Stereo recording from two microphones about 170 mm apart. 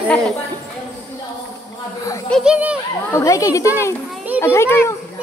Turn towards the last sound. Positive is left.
turn(degrees=15)  # may be behind; listen again after turning